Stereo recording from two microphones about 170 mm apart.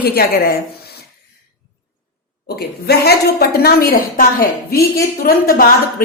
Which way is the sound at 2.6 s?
70° left (ahead or behind).